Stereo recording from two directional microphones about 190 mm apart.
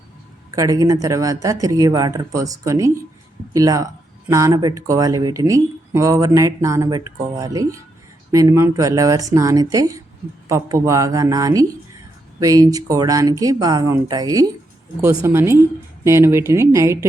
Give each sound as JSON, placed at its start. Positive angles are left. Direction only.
{"t": 0.5, "sound": "speech", "side_deg": -20}